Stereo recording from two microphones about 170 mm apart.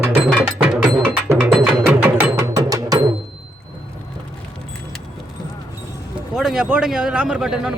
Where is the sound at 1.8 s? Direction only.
15° right (ahead or behind).